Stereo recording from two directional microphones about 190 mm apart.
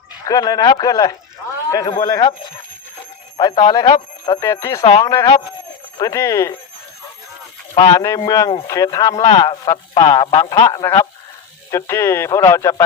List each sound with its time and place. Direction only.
0.3 s a man's voice: 20° left (ahead or behind)
3.3 s a man's voice: 20° left (ahead or behind)
7.8 s a man's voice: 15° left (ahead or behind)